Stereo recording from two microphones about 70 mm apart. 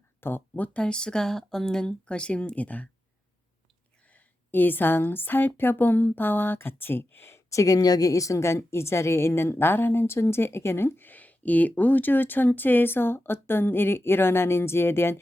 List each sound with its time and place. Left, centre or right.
0.2 s speech: left
4.1 s a woman's voice: left